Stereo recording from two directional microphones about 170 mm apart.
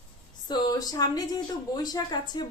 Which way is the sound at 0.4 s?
25° left (ahead or behind).